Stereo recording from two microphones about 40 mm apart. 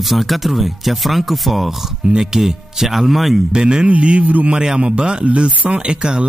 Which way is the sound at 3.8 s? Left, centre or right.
Right.